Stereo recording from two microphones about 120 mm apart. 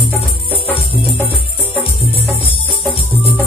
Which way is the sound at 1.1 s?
15° left (ahead or behind).